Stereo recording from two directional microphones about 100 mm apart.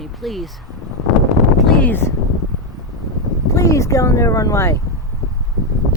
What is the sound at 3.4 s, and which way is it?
Speech, 30° left (ahead or behind).